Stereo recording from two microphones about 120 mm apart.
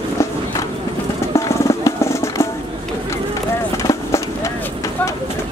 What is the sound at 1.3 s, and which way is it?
Music, 25° left (ahead or behind).